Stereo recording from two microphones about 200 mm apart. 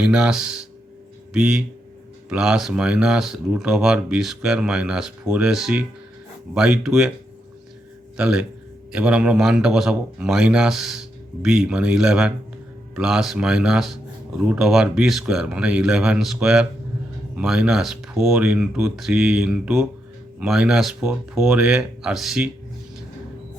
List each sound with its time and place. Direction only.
0.0 s speech: 5° right (ahead or behind)
8.1 s a man's voice: 5° right (ahead or behind)